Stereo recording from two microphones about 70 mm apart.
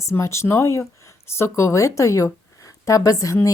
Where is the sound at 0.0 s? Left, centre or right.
Left.